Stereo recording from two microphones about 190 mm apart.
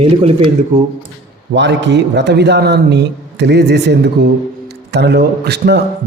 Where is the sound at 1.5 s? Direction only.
70° right (ahead or behind).